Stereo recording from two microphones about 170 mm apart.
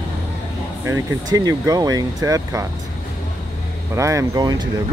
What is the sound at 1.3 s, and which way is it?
Speech, 20° right (ahead or behind).